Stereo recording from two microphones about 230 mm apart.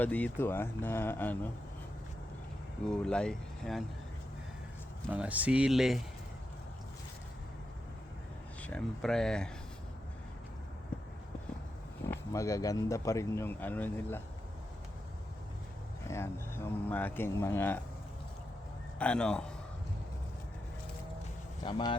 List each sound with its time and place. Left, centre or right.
0.0 s speech: centre
2.9 s speech: centre
5.1 s speech: centre
8.6 s speech: centre
12.0 s speech: centre
16.0 s speech: centre
18.9 s speech: centre
21.6 s speech: centre